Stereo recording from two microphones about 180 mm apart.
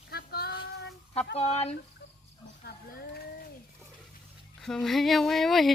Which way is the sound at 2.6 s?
60° left (ahead or behind).